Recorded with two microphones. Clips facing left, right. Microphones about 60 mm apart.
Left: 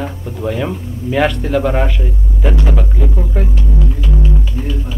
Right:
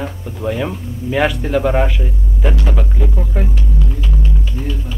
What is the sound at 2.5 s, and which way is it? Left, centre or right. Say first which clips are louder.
Music: left 2 dB; centre.